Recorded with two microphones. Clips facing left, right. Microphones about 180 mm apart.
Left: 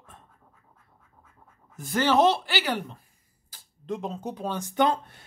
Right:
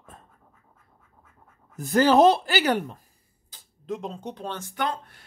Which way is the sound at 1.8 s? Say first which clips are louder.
Right 4 dB; 45° right (ahead or behind).